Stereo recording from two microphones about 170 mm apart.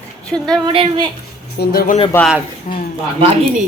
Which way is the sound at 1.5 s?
70° left (ahead or behind).